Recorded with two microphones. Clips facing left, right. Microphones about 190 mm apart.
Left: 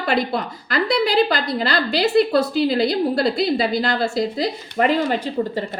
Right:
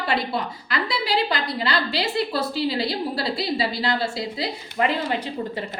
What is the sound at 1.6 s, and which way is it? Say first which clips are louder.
A woman's voice: left 6 dB; 45° left (ahead or behind).